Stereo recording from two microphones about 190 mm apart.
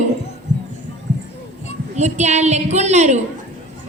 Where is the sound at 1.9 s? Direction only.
35° right (ahead or behind).